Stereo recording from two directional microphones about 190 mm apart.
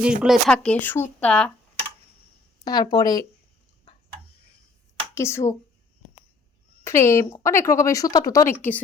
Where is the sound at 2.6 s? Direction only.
20° left (ahead or behind).